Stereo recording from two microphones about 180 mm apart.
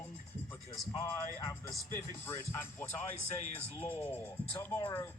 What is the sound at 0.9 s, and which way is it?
Speech, 15° left (ahead or behind).